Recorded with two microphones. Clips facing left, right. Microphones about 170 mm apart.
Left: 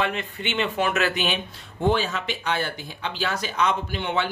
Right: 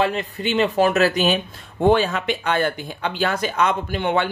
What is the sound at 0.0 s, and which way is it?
A man's voice, 35° right (ahead or behind).